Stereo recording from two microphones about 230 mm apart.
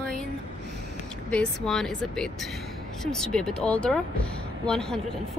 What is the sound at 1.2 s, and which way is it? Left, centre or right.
Speech, centre.